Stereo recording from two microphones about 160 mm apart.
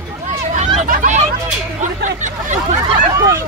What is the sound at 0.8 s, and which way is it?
Speech, 50° right (ahead or behind).